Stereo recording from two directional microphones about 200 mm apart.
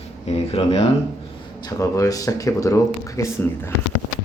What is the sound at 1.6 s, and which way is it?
Speech, 15° left (ahead or behind).